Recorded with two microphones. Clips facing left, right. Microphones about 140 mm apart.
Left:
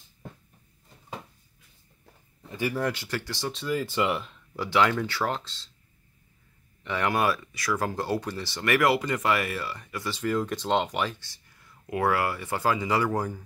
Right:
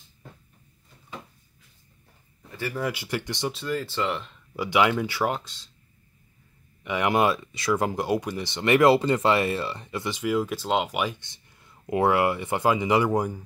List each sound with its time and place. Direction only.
2.7 s speech: 5° right (ahead or behind)
3.5 s speech: 10° left (ahead or behind)
4.6 s speech: 15° right (ahead or behind)
6.8 s speech: 15° right (ahead or behind)